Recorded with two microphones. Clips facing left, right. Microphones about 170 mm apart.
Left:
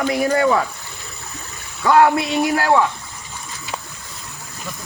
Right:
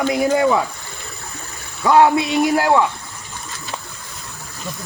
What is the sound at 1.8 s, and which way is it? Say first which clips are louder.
Speech: right 1 dB; 15° right (ahead or behind).